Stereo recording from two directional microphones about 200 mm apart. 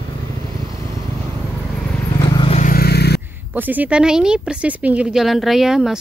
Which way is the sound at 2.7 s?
50° left (ahead or behind).